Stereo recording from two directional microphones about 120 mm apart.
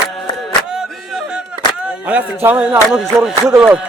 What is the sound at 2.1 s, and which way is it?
Speech, 15° right (ahead or behind).